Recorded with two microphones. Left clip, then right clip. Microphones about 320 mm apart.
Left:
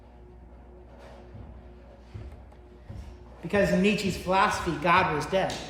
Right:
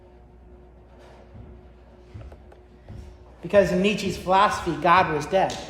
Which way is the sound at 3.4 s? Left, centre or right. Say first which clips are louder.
Right 5 dB; centre.